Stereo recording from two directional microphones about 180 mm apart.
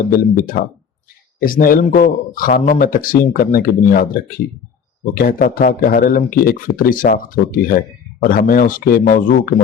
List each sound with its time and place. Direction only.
0.1 s speech: 50° left (ahead or behind)